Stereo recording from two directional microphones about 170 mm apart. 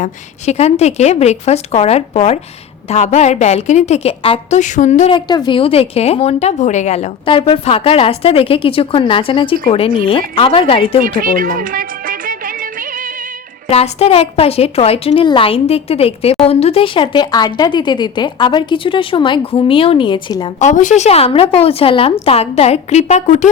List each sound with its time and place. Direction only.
0.0 s a woman's voice: 40° left (ahead or behind)
5.1 s a woman's voice: 25° left (ahead or behind)
11.0 s speech: 55° right (ahead or behind)
13.7 s a woman's voice: 35° left (ahead or behind)
20.6 s a woman's voice: 45° left (ahead or behind)